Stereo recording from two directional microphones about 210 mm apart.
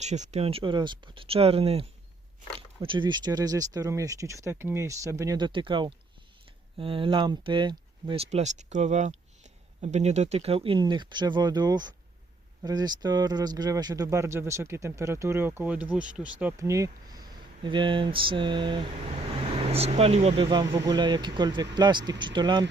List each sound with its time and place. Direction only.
0.0 s speech: 35° right (ahead or behind)